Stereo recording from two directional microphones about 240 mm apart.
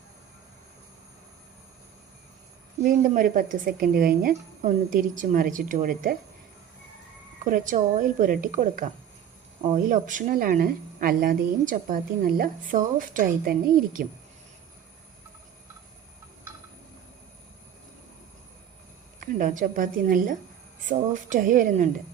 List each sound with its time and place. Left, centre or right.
2.8 s a woman's voice: right
7.5 s a woman's voice: right
19.2 s a woman's voice: right